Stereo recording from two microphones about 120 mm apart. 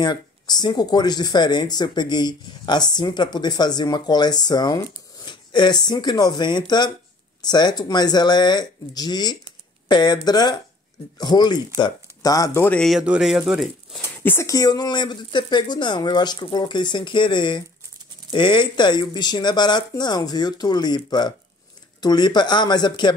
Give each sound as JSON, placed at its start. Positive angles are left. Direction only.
{"t": 0.0, "sound": "speech", "side_deg": 35}
{"t": 13.0, "sound": "speech", "side_deg": -5}
{"t": 14.2, "sound": "speech", "side_deg": 20}
{"t": 14.5, "sound": "speech", "side_deg": 35}